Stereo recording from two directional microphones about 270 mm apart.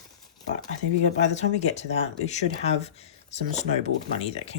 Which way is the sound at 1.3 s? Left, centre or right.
Left.